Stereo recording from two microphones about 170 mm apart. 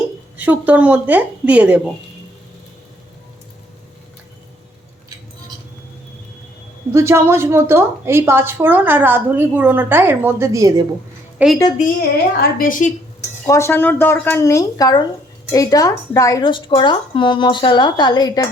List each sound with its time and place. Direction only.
0.3 s a woman's voice: 10° right (ahead or behind)
6.9 s a woman's voice: 15° right (ahead or behind)
11.4 s a woman's voice: 10° right (ahead or behind)
12.4 s a woman's voice: 55° left (ahead or behind)
13.4 s speech: 15° left (ahead or behind)